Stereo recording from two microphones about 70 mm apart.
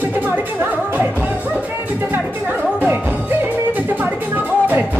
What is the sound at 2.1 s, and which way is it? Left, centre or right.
Music, right.